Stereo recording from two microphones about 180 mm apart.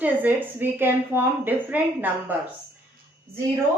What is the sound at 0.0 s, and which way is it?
A woman's voice, 10° right (ahead or behind).